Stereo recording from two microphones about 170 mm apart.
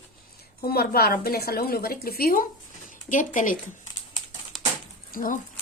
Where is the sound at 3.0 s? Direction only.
50° left (ahead or behind).